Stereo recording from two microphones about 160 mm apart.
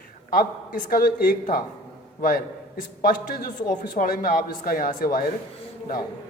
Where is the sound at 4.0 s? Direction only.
65° left (ahead or behind).